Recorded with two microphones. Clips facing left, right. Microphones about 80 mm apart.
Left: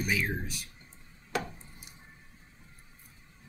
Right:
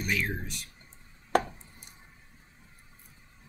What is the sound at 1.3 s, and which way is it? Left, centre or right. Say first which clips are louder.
Chopping: right 8 dB; right.